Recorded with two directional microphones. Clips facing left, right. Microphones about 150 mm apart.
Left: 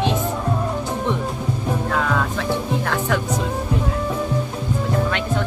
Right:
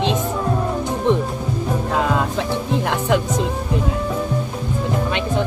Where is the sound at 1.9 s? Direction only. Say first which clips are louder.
Right 4 dB; 20° right (ahead or behind).